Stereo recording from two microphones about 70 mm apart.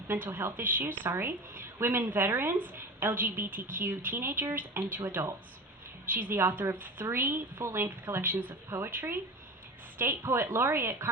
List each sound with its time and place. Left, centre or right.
0.1 s a woman's voice: right
2.3 s a woman's voice: right